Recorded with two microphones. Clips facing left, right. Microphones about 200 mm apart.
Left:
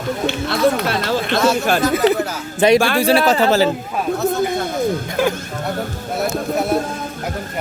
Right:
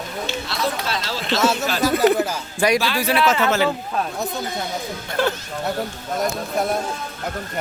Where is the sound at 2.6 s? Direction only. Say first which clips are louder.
Left 6 dB; 25° left (ahead or behind).